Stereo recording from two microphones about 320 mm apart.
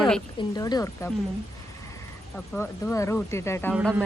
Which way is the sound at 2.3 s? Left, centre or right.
Centre.